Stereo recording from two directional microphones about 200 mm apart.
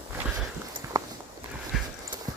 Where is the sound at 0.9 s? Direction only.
20° right (ahead or behind).